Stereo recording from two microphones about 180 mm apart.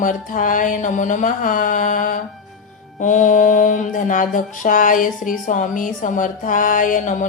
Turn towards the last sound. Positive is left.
turn(degrees=45)  # may be behind; listen again after turning